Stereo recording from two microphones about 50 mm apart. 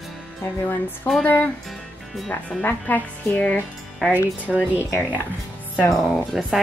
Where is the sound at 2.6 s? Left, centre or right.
Left.